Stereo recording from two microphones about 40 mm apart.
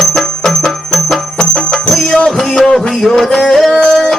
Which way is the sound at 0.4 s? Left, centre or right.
Centre.